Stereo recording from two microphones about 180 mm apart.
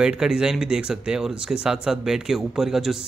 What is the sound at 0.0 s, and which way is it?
Speech, 5° right (ahead or behind).